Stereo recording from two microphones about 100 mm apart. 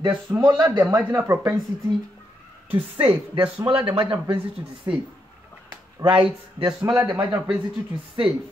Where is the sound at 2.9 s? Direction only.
65° right (ahead or behind).